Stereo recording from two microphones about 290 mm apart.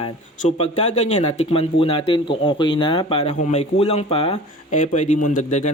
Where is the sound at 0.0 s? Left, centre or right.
Left.